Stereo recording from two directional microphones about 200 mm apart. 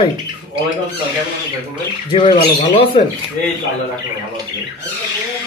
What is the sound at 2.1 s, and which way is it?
Speech, 30° left (ahead or behind).